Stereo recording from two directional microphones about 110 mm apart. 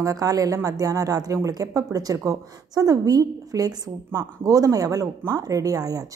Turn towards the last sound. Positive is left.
turn(degrees=-35)  # may be behind; listen again after turning